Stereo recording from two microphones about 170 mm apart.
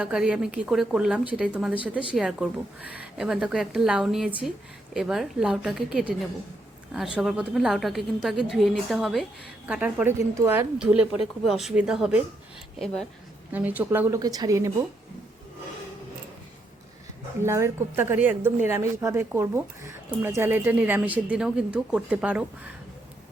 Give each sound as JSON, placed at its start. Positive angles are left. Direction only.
{"t": 0.0, "sound": "speech", "side_deg": -5}
{"t": 13.5, "sound": "speech", "side_deg": -10}
{"t": 17.4, "sound": "speech", "side_deg": -15}